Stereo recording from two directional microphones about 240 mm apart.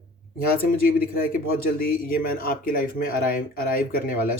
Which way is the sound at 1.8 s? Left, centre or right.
Left.